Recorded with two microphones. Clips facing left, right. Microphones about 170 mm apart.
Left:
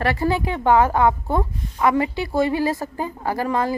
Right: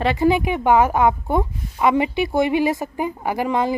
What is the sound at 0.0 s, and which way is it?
A woman's voice, 15° right (ahead or behind).